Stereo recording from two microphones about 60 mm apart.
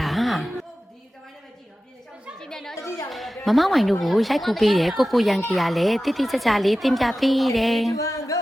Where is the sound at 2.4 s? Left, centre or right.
Centre.